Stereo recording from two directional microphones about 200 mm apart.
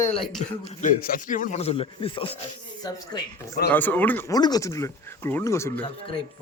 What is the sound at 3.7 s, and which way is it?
Speech, 10° left (ahead or behind).